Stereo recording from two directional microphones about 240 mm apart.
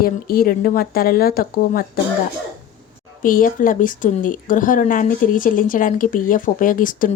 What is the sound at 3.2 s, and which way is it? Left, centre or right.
Speech, left.